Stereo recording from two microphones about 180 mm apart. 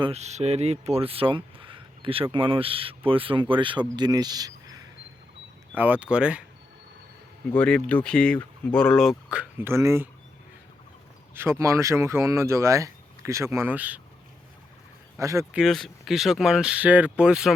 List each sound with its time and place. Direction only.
0.0 s speech: 35° right (ahead or behind); by 4.8 s 20° right (ahead or behind)
5.7 s speech: 10° right (ahead or behind)
7.5 s speech: 5° left (ahead or behind); by 10.1 s 15° right (ahead or behind)
11.3 s speech: 15° right (ahead or behind)
15.2 s speech: 15° right (ahead or behind)
15.5 s speech: centre (ahead or behind)